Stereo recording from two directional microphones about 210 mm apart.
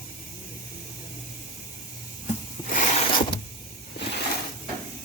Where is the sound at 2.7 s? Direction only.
35° left (ahead or behind).